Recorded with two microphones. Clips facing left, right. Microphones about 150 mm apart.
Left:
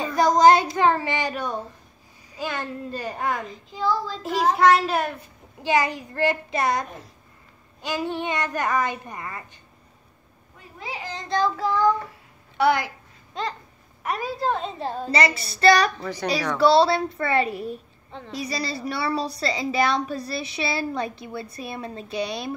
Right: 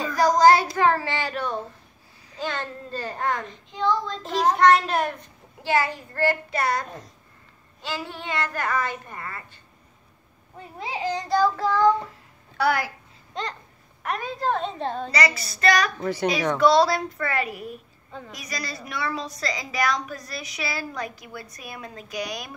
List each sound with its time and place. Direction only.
0.0 s child singing: 25° left (ahead or behind)
2.3 s a child's voice: 10° left (ahead or behind)
5.6 s a child's voice: 15° left (ahead or behind)
11.1 s child singing: 15° right (ahead or behind)
12.5 s a woman's voice: 20° left (ahead or behind)
14.0 s a woman's voice: 5° left (ahead or behind)
15.0 s a woman's voice: 25° left (ahead or behind)